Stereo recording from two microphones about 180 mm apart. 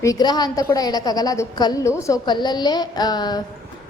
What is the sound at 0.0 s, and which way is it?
A woman's voice, 20° left (ahead or behind).